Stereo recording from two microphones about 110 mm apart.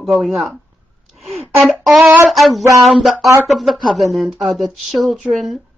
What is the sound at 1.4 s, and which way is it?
Speech, 20° right (ahead or behind).